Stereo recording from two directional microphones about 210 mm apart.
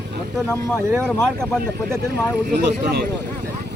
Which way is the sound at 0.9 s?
5° left (ahead or behind).